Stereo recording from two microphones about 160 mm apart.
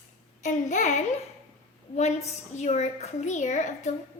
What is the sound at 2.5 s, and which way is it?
A woman's voice, 45° left (ahead or behind).